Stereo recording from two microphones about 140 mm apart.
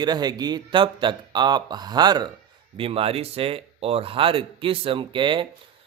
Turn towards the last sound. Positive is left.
turn(degrees=-35)  # may be behind; listen again after turning